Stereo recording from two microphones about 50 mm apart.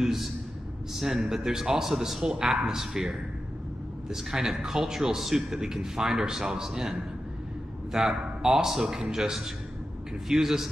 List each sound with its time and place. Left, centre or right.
0.0 s a man's voice: centre
2.2 s a man's voice: centre